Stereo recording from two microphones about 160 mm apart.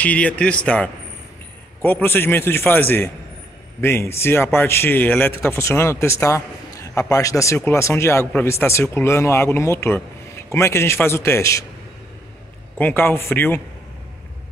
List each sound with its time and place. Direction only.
0.0 s a man's voice: 10° left (ahead or behind)
12.7 s a man's voice: 10° left (ahead or behind)